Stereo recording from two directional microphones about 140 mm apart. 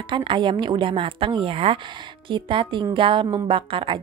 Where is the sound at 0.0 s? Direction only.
35° right (ahead or behind).